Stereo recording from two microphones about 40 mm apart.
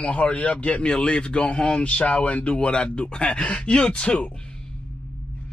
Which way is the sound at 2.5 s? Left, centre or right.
Left.